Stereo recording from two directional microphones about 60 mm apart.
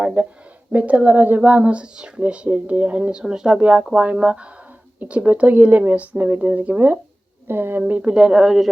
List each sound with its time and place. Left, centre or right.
0.0 s speech: centre
3.6 s speech: right
7.4 s speech: right; by 8.7 s centre